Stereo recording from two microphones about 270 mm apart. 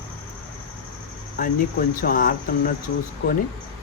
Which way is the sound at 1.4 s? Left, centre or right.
Left.